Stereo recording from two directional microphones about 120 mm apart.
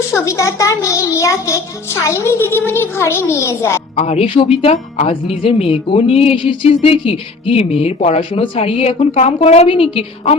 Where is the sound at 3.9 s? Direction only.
50° left (ahead or behind).